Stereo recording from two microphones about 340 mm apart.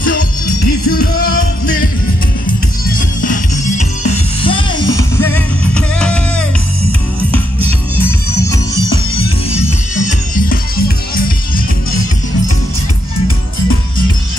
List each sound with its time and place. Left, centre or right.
0.0 s music: left; by 6.4 s centre
9.1 s music: centre